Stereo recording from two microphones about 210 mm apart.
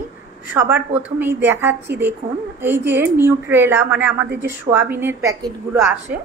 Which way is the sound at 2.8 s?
55° right (ahead or behind).